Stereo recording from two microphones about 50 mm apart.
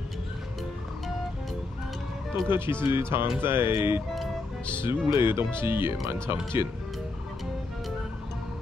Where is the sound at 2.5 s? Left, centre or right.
Right.